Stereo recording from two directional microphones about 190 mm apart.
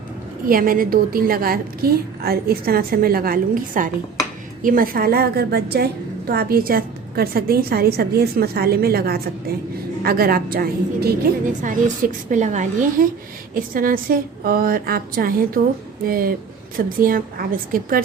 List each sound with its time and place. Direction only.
0.4 s a woman's voice: 50° right (ahead or behind)